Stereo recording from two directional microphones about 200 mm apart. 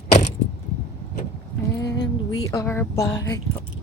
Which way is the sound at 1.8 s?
60° left (ahead or behind).